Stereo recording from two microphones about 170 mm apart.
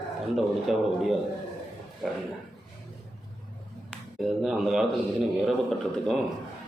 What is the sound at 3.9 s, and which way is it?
A man's voice, centre (ahead or behind).